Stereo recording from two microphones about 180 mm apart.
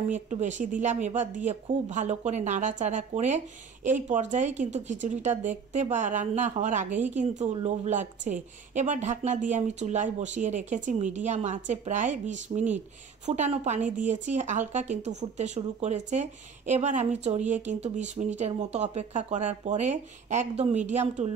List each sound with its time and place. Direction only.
0.1 s speech: 40° right (ahead or behind)